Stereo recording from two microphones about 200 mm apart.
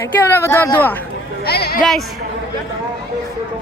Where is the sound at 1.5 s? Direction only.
50° left (ahead or behind).